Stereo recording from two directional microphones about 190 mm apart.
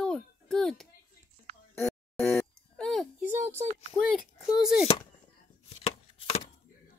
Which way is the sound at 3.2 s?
10° right (ahead or behind).